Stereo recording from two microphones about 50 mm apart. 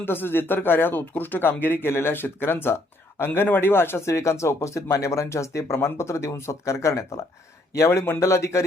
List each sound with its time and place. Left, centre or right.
0.0 s speech: left
8.2 s speech: left